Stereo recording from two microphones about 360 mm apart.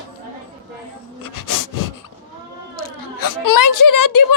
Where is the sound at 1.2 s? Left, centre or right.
Left.